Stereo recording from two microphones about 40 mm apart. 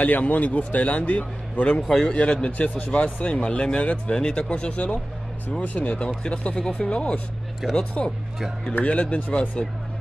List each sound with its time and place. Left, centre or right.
0.0 s a man's voice: left
1.8 s a man's voice: centre
2.1 s a man's voice: left
2.5 s a man's voice: left
3.4 s a man's voice: left
7.6 s speech: centre
8.8 s speech: left